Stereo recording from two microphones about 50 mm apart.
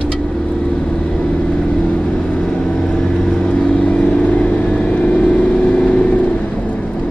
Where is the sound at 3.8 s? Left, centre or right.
Left.